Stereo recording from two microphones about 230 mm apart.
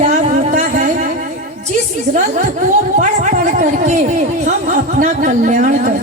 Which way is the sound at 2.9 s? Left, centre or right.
Right.